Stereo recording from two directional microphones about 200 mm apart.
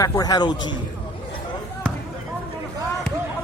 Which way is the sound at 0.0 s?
20° left (ahead or behind).